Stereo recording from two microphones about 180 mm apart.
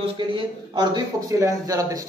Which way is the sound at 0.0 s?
25° right (ahead or behind).